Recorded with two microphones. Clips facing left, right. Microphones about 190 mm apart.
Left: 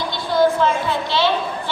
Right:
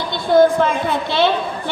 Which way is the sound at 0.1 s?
55° right (ahead or behind).